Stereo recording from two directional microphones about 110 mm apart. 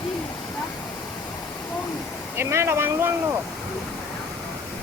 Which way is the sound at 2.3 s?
25° right (ahead or behind).